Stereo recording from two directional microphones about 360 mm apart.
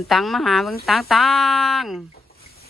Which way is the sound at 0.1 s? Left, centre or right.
Centre.